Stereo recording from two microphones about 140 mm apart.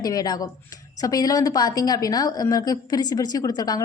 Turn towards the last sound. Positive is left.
turn(degrees=25)  # may be behind; listen again after turning